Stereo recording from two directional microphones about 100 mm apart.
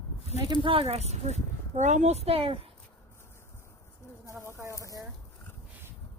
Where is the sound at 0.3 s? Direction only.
45° right (ahead or behind).